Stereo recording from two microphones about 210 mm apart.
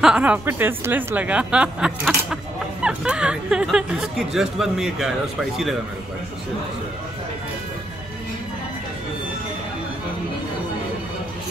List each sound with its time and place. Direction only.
0.0 s speech: 5° right (ahead or behind)